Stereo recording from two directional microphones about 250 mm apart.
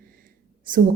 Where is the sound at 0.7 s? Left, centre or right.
Right.